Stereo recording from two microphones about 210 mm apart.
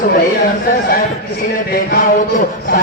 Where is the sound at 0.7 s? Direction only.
45° left (ahead or behind).